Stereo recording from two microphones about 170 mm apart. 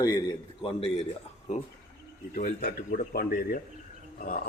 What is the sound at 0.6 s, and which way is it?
Speech, 30° left (ahead or behind).